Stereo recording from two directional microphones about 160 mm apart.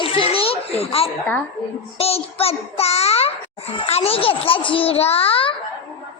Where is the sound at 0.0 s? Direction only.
35° left (ahead or behind).